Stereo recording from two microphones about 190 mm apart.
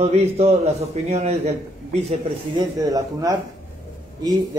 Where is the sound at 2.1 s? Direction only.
20° right (ahead or behind).